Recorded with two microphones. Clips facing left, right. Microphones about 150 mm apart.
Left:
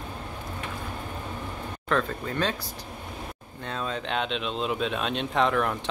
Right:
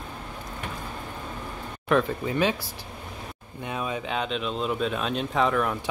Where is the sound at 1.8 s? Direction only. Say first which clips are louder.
Right 4 dB; 15° right (ahead or behind).